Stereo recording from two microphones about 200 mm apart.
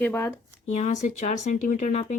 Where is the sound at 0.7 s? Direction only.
35° left (ahead or behind).